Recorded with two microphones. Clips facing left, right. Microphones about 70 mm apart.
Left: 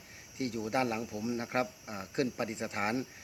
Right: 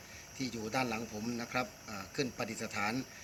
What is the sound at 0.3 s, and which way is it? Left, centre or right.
Speech, left.